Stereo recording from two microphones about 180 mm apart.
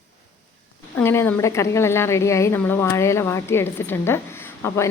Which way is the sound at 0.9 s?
15° left (ahead or behind).